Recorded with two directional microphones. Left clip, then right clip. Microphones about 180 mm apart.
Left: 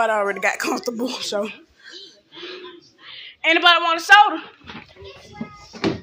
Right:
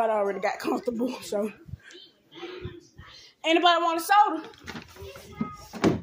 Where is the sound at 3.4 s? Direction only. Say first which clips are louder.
Left 6 dB; 20° right (ahead or behind).